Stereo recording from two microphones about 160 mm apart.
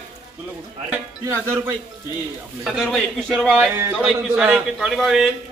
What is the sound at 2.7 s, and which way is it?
A man's voice, centre (ahead or behind).